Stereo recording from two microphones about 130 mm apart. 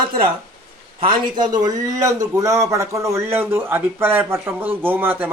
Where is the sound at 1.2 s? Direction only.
35° right (ahead or behind).